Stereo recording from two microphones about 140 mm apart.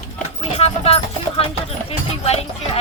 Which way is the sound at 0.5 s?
45° left (ahead or behind).